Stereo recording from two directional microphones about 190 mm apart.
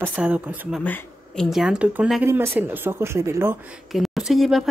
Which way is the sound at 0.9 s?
5° left (ahead or behind).